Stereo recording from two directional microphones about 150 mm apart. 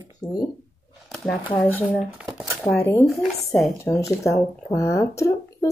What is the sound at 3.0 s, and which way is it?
Speech, centre (ahead or behind).